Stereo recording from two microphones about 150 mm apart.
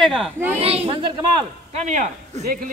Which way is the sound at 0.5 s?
40° right (ahead or behind).